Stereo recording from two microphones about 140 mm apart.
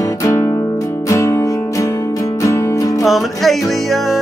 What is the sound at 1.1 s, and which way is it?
Music, 20° left (ahead or behind).